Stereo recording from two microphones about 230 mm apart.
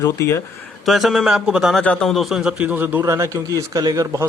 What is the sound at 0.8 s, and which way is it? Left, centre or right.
A man's voice, centre.